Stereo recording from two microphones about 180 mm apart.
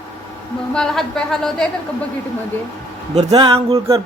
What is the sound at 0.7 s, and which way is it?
Speech, 5° left (ahead or behind).